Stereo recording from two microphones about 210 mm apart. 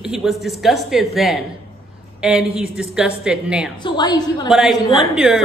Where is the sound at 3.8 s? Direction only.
20° left (ahead or behind).